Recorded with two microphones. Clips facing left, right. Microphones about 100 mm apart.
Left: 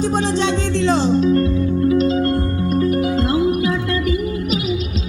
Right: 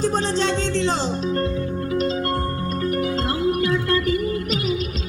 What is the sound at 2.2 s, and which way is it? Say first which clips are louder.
Music: left 5 dB; 20° left (ahead or behind).